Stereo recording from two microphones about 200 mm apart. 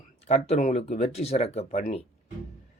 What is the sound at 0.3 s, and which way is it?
A man's voice, 30° left (ahead or behind).